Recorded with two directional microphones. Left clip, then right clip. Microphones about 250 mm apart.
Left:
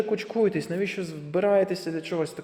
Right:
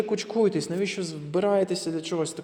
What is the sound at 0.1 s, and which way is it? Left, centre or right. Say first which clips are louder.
A man's voice: even; centre.